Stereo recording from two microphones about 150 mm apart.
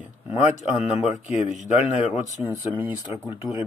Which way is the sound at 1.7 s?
45° left (ahead or behind).